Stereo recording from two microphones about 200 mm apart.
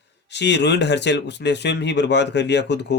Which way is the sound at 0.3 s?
60° left (ahead or behind).